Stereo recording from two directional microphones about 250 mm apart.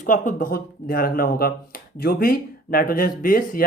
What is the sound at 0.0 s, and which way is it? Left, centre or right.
Speech, left.